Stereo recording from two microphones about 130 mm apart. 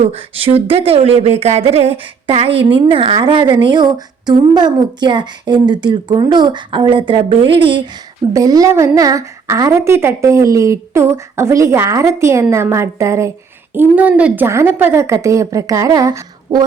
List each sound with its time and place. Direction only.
0.0 s speech: 45° right (ahead or behind)
8.3 s a woman's voice: 25° right (ahead or behind)